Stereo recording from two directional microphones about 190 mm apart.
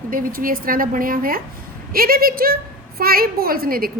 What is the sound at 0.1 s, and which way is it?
A woman's voice, 45° right (ahead or behind).